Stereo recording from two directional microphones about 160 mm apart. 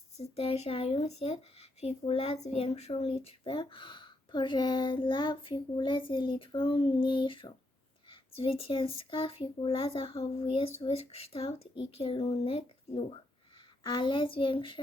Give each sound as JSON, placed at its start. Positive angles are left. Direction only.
{"t": 0.2, "sound": "speech", "side_deg": 40}